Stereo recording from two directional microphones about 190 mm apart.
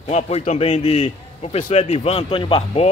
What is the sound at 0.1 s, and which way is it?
A man's voice, 35° left (ahead or behind).